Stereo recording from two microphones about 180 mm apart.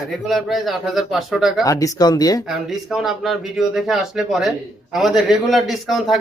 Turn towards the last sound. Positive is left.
turn(degrees=0)  # may be behind; listen again after turning